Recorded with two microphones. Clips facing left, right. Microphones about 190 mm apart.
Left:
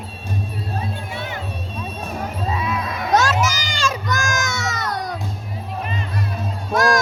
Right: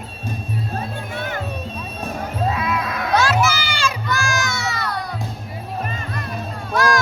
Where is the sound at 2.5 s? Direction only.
85° right.